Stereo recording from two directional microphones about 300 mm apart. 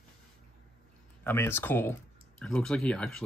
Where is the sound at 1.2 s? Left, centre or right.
Centre.